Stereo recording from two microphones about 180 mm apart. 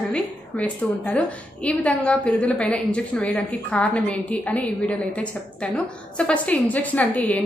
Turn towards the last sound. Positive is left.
turn(degrees=5)  # may be behind; listen again after turning